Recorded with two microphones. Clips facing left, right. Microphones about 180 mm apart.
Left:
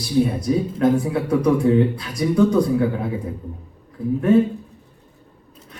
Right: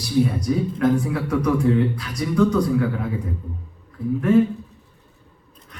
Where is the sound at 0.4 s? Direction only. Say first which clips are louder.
Left 2 dB; 25° left (ahead or behind).